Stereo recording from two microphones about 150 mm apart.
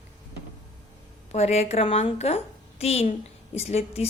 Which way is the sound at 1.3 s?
45° left (ahead or behind).